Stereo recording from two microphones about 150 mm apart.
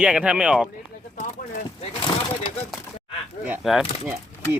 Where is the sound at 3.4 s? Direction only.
10° right (ahead or behind).